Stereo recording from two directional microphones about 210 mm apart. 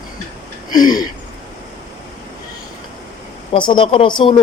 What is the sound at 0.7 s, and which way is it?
Speech, 20° left (ahead or behind).